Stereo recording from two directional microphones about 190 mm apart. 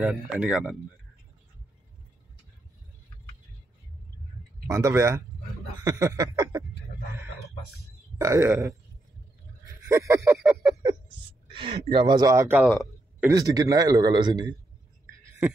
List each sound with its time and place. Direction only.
0.0 s speech: 5° right (ahead or behind)
4.6 s a man's voice: 15° right (ahead or behind)
8.2 s speech: 15° right (ahead or behind)
9.8 s a sound: 15° right (ahead or behind)
11.5 s a man's voice: 25° right (ahead or behind)